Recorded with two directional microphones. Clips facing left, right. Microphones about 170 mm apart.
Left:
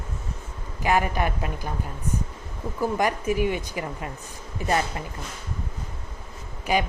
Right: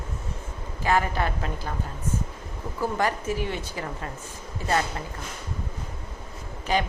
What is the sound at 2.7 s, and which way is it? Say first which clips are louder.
Speech: left 2 dB; 15° left (ahead or behind).